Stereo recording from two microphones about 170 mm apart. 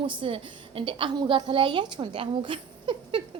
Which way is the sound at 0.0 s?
30° right (ahead or behind).